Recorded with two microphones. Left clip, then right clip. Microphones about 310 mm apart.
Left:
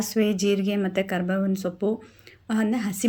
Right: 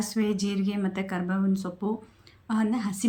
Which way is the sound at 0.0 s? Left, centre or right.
Centre.